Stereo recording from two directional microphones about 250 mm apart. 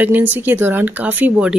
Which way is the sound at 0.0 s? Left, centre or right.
Centre.